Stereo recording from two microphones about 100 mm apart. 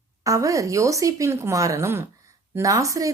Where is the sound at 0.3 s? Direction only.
35° right (ahead or behind).